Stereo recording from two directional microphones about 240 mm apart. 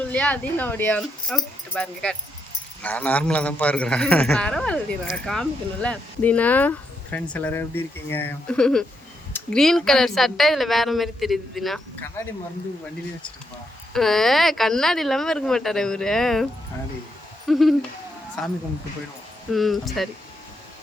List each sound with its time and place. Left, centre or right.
0.1 s a man's voice: centre
13.9 s a man's voice: centre
17.4 s owl: centre
18.4 s a man's voice: centre
19.5 s a man's voice: centre